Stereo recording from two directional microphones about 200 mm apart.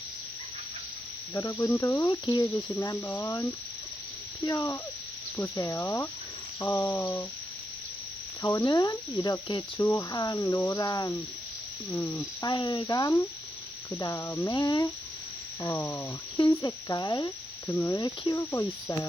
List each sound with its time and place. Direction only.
1.3 s cricket: 15° left (ahead or behind)
8.4 s cricket: 15° left (ahead or behind)
15.6 s speech: 10° left (ahead or behind)